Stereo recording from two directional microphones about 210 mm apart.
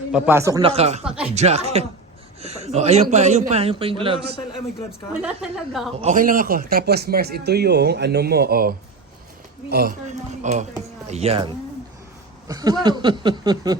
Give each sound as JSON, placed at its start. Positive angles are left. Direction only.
{"t": 0.1, "sound": "speech", "side_deg": -10}
{"t": 0.6, "sound": "a man's voice", "side_deg": -30}
{"t": 1.0, "sound": "a sound", "side_deg": -5}
{"t": 1.4, "sound": "a man's voice", "side_deg": -30}
{"t": 5.2, "sound": "a woman's voice", "side_deg": 0}
{"t": 6.0, "sound": "a man's voice", "side_deg": -35}
{"t": 10.1, "sound": "a man's voice", "side_deg": -35}